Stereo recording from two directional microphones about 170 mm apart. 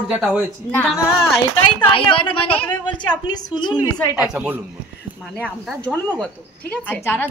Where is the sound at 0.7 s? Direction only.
10° left (ahead or behind).